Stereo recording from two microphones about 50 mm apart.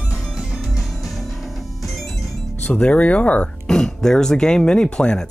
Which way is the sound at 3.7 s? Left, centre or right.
Centre.